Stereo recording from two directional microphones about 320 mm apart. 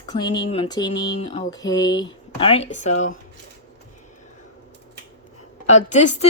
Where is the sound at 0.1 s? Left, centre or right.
Centre.